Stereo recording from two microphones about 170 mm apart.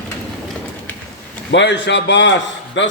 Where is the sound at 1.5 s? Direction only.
90° left.